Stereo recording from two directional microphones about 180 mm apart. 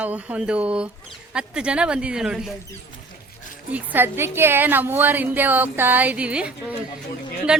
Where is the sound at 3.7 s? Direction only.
10° right (ahead or behind).